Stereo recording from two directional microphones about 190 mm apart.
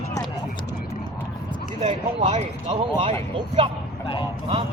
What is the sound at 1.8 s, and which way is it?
Speech, 25° right (ahead or behind).